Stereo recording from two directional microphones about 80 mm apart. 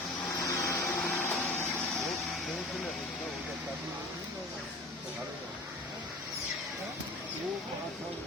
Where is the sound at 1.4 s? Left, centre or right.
Left.